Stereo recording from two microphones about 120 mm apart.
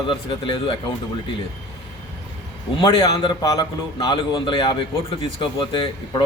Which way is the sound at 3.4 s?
30° left (ahead or behind).